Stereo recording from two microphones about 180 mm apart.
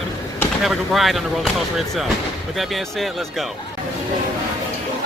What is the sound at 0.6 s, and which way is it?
Speech, centre (ahead or behind).